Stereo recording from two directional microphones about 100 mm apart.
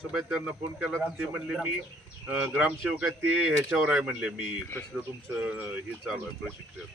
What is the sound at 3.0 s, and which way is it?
A man's voice, 20° right (ahead or behind).